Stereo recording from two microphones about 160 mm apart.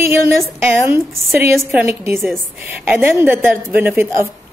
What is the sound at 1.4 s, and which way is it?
A woman's voice, 10° right (ahead or behind).